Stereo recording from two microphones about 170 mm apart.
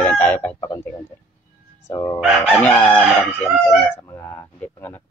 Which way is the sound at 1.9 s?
20° left (ahead or behind).